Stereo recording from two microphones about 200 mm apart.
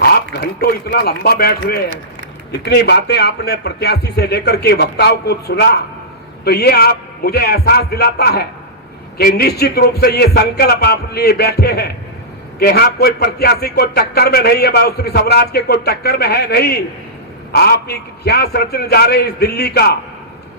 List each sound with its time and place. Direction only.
0.1 s a man's voice: 55° left (ahead or behind)